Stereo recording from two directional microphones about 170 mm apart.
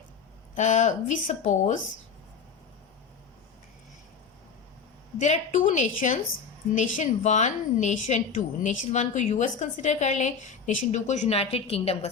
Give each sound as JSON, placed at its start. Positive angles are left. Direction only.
{"t": 0.5, "sound": "a woman's voice", "side_deg": 45}
{"t": 5.2, "sound": "a woman's voice", "side_deg": 45}